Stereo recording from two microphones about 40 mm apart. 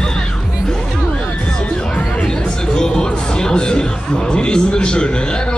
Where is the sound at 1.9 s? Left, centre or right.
Centre.